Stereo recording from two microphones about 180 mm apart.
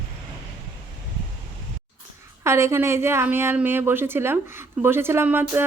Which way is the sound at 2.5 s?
15° right (ahead or behind).